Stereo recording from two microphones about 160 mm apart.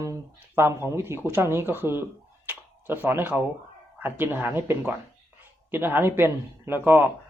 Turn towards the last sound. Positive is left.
turn(degrees=-10)  # may be behind; listen again after turning